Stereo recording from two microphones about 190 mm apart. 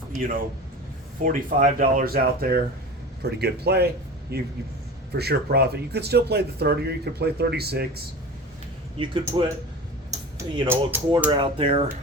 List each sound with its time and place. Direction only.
0.1 s speech: 45° right (ahead or behind)
9.2 s speech: 20° right (ahead or behind)
10.1 s music: 15° right (ahead or behind)
11.3 s speech: 25° right (ahead or behind)